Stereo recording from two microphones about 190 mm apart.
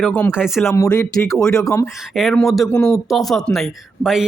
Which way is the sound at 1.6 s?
15° left (ahead or behind).